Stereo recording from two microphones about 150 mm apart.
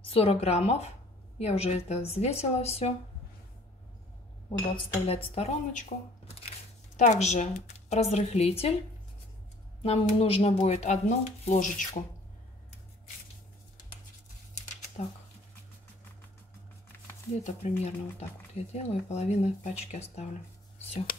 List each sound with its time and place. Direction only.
0.0 s speech: 40° left (ahead or behind)
4.5 s speech: 40° left (ahead or behind)
9.8 s a woman's voice: 40° left (ahead or behind)
10.6 s speech: 50° left (ahead or behind)
14.5 s a sound: 50° left (ahead or behind)
17.4 s speech: 50° left (ahead or behind)